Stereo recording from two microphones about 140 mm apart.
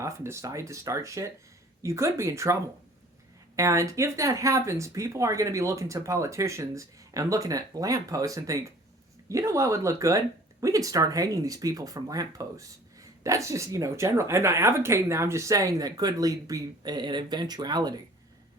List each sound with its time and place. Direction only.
0.0 s speech: 20° right (ahead or behind)